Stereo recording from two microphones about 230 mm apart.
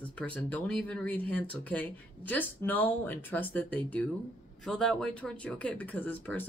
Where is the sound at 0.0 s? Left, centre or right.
Centre.